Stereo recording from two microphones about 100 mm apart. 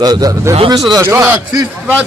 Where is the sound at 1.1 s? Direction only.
20° right (ahead or behind).